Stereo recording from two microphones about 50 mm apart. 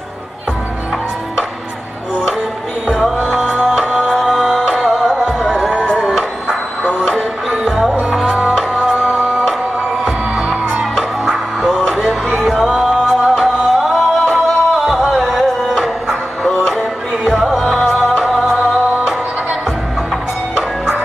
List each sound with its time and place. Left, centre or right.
4.2 s music: centre
5.7 s music: centre
12.5 s music: centre